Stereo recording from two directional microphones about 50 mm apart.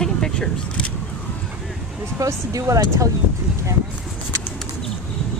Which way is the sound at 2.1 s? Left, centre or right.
Right.